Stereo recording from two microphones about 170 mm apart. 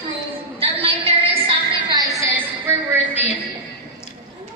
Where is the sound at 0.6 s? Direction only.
35° right (ahead or behind).